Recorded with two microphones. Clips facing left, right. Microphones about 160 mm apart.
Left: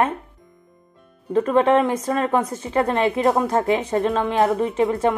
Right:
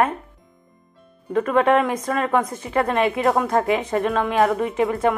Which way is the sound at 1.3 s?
30° left (ahead or behind).